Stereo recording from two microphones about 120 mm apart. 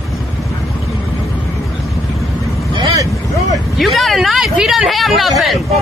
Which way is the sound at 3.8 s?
Centre (ahead or behind).